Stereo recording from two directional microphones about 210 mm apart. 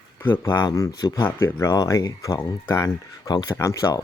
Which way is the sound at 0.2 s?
10° left (ahead or behind).